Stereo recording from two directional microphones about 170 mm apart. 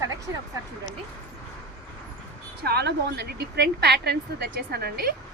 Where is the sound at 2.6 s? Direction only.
70° right (ahead or behind).